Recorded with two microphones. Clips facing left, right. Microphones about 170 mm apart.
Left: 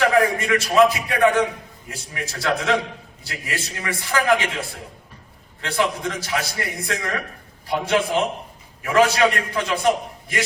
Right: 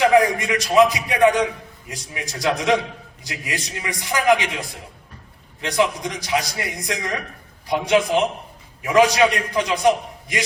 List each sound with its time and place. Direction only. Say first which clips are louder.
0.0 s a man's voice: right 2 dB; 15° right (ahead or behind)
5.6 s a man's voice: right 2 dB; 15° right (ahead or behind)